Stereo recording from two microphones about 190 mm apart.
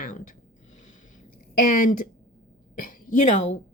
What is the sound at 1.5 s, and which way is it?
Speech, 45° left (ahead or behind).